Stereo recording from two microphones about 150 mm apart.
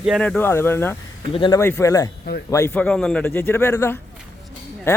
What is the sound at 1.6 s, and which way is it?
Speech, 15° left (ahead or behind).